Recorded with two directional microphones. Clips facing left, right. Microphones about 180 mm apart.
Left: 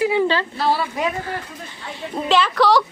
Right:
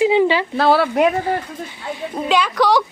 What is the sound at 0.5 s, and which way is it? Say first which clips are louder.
Speech: right 6 dB; 70° right (ahead or behind).